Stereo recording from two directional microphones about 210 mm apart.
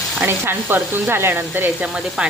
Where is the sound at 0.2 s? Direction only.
10° right (ahead or behind).